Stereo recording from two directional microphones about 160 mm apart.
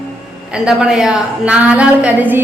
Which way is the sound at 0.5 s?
5° right (ahead or behind).